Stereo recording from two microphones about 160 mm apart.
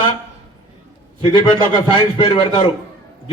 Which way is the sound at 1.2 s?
30° left (ahead or behind).